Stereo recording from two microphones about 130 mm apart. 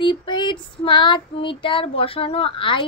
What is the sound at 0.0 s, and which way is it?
Child singing, 35° left (ahead or behind).